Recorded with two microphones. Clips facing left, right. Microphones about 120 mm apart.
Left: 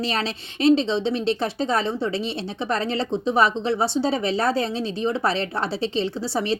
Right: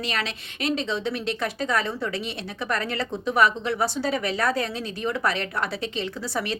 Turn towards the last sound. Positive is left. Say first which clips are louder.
# left 4 dB
turn(degrees=30)  # may be behind; listen again after turning